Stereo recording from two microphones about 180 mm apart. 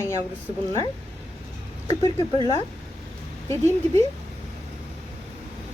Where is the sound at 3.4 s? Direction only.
15° left (ahead or behind).